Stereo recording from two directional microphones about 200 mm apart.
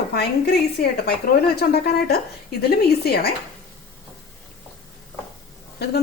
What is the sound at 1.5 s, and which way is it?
A woman's voice, 55° left (ahead or behind).